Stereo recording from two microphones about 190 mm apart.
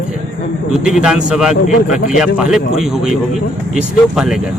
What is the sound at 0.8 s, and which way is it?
A man's voice, 5° right (ahead or behind).